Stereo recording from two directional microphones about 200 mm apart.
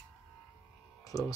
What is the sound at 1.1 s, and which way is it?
Speech, 15° left (ahead or behind).